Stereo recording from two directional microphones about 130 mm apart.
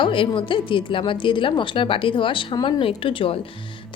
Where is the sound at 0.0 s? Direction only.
40° left (ahead or behind).